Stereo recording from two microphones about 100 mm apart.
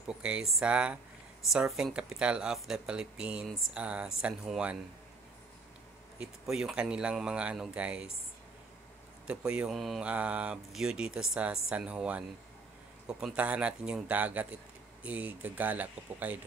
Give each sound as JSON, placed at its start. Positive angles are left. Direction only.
{"t": 0.1, "sound": "speech", "side_deg": -10}
{"t": 6.1, "sound": "speech", "side_deg": -5}
{"t": 9.3, "sound": "speech", "side_deg": -10}
{"t": 9.8, "sound": "mantra", "side_deg": 0}
{"t": 10.0, "sound": "speech", "side_deg": -15}